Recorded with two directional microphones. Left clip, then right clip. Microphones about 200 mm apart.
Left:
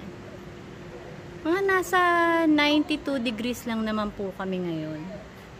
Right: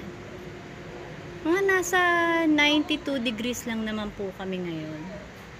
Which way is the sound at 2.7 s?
45° left (ahead or behind).